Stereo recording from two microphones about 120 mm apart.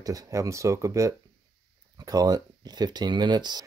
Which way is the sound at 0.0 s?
30° right (ahead or behind).